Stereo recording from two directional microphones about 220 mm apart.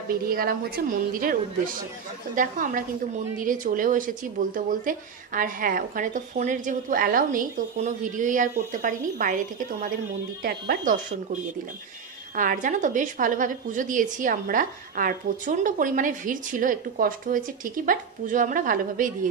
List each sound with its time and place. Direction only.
0.1 s a woman's voice: 40° right (ahead or behind)
12.4 s a woman's voice: 35° right (ahead or behind)